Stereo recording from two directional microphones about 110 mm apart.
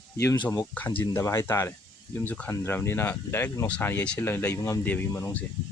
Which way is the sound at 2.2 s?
15° left (ahead or behind).